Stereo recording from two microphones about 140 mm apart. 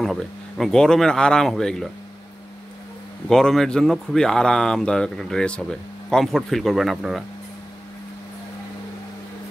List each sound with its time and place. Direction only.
0.0 s speech: centre (ahead or behind)
3.3 s speech: 5° left (ahead or behind)